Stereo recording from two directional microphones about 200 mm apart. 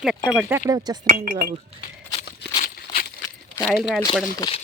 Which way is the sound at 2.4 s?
55° left (ahead or behind).